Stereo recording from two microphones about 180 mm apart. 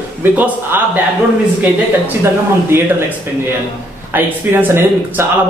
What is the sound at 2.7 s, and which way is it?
Speech, 15° right (ahead or behind).